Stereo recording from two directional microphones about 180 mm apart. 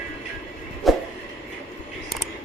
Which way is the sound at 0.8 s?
Centre (ahead or behind).